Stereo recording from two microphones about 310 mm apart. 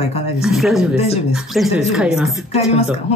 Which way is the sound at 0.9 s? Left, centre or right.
Centre.